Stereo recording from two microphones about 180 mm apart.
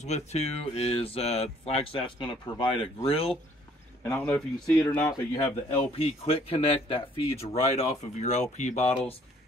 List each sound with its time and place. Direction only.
0.0 s speech: 40° left (ahead or behind)
4.0 s a man's voice: 10° left (ahead or behind)
5.9 s speech: 35° left (ahead or behind)